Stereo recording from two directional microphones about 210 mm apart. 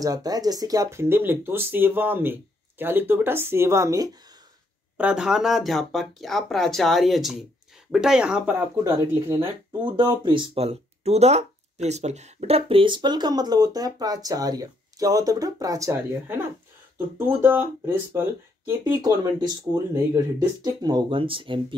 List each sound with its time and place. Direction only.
0.0 s speech: 20° right (ahead or behind)
4.9 s speech: 5° right (ahead or behind); by 21.7 s 25° right (ahead or behind)